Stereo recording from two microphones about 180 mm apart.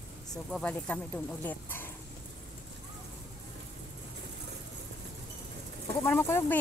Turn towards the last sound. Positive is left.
turn(degrees=15)  # may be behind; listen again after turning